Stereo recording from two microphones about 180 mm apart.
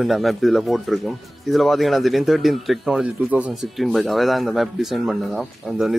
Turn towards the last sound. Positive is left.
turn(degrees=0)  # may be behind; listen again after turning